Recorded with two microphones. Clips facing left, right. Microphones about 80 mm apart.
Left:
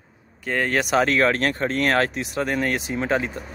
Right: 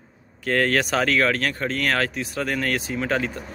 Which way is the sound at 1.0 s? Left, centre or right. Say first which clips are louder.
Left 1 dB; left.